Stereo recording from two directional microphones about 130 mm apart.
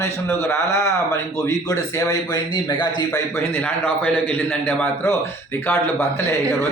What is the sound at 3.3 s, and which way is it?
A man's voice, 20° left (ahead or behind).